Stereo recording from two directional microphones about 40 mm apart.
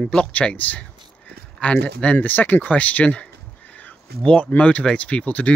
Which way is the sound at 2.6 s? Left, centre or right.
Left.